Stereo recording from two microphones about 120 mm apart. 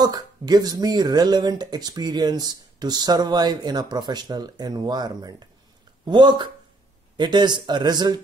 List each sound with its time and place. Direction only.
0.0 s speech: 35° right (ahead or behind)